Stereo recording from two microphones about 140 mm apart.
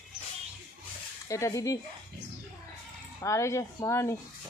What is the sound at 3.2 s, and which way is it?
Speech, 20° left (ahead or behind).